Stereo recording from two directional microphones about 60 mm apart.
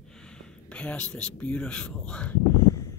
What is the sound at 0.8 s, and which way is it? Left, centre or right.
Speech, centre.